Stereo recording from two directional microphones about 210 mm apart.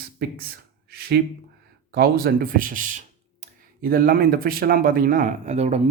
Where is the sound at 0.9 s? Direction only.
45° right (ahead or behind).